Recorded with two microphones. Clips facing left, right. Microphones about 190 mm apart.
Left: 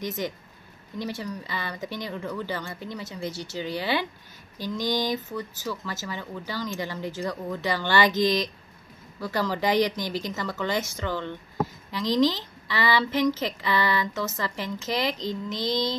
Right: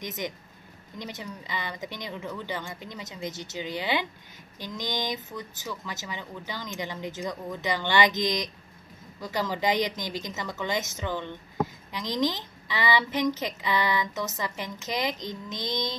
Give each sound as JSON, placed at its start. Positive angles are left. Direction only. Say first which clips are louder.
{"t": 0.0, "sound": "speech", "louder": "left 4 dB", "side_deg": -20}